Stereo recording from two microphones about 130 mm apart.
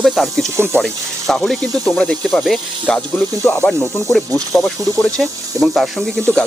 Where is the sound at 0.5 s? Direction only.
20° right (ahead or behind).